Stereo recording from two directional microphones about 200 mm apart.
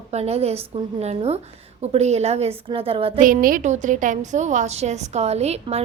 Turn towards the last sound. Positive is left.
turn(degrees=-30)  # may be behind; listen again after turning